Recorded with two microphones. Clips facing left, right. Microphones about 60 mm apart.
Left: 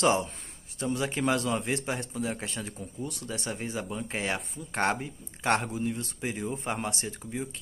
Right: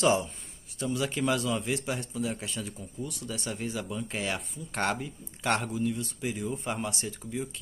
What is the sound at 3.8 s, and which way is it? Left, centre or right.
Speech, left.